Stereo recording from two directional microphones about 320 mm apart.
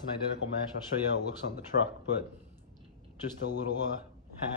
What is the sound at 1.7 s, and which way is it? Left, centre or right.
Speech, left.